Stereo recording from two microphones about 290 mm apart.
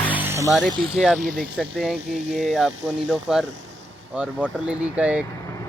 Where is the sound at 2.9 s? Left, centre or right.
Centre.